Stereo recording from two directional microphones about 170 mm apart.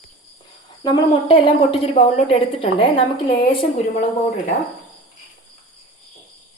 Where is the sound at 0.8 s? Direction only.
30° left (ahead or behind).